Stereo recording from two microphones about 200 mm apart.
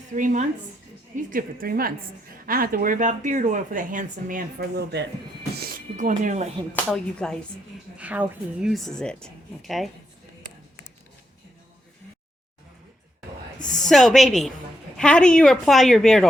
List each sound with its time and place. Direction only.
0.1 s a woman's voice: 40° right (ahead or behind)
5.6 s music: 40° right (ahead or behind)
6.9 s a woman's voice: 5° left (ahead or behind)
7.9 s a woman's voice: 5° right (ahead or behind)
13.8 s a woman's voice: centre (ahead or behind)